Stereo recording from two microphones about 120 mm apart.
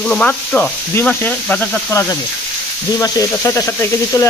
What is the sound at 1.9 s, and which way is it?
Speech, 25° left (ahead or behind).